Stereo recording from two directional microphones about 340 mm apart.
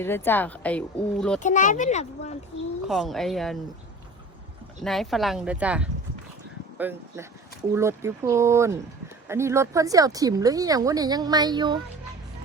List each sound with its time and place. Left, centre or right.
0.0 s speech: centre
1.4 s speech: left
2.8 s speech: centre
4.8 s speech: centre